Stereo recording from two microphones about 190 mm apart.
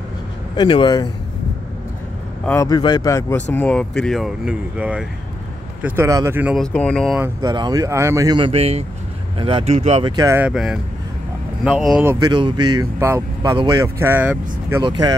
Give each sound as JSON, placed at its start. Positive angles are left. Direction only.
{"t": 0.6, "sound": "speech", "side_deg": 25}
{"t": 2.4, "sound": "speech", "side_deg": 15}
{"t": 6.5, "sound": "speech", "side_deg": 5}
{"t": 7.2, "sound": "speech", "side_deg": -20}
{"t": 10.1, "sound": "speech", "side_deg": -15}
{"t": 10.5, "sound": "speech", "side_deg": 0}
{"t": 11.8, "sound": "speech", "side_deg": -5}
{"t": 12.2, "sound": "speech", "side_deg": -25}
{"t": 14.8, "sound": "speech", "side_deg": -20}